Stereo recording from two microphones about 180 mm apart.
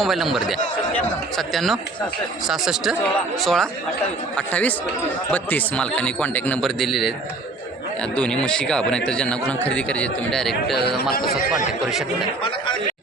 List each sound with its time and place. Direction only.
0.0 s a man's voice: centre (ahead or behind)
8.1 s a man's voice: 5° left (ahead or behind)
10.8 s speech: 65° left (ahead or behind)